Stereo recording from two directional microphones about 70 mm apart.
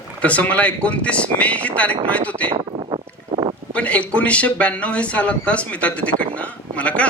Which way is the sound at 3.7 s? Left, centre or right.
Centre.